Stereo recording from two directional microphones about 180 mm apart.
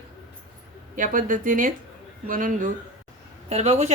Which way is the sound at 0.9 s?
50° right (ahead or behind).